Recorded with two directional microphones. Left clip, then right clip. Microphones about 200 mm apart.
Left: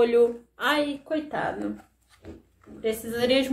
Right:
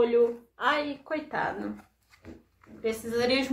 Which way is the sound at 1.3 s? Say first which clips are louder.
Left 2 dB; 5° right (ahead or behind).